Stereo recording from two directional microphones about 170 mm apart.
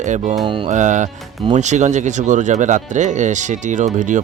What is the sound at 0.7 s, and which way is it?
Speech, 45° right (ahead or behind).